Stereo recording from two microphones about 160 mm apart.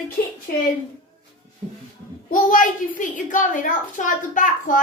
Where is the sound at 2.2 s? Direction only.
55° left (ahead or behind).